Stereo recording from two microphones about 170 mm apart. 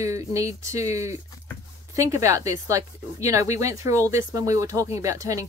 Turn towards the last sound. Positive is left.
turn(degrees=-20)  # may be behind; listen again after turning